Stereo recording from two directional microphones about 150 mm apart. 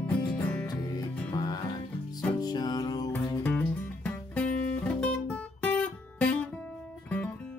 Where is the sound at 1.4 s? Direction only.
30° left (ahead or behind).